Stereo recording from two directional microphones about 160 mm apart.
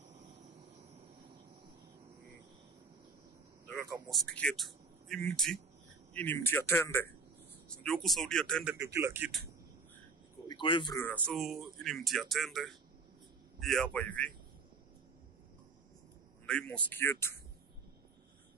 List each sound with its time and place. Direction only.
4.1 s speech: 5° left (ahead or behind)
8.7 s a man's voice: 15° right (ahead or behind)
10.5 s speech: 30° left (ahead or behind)
11.2 s speech: centre (ahead or behind)
16.4 s speech: 5° left (ahead or behind)